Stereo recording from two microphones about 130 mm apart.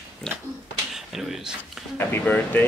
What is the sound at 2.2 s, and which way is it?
Speech, 10° left (ahead or behind).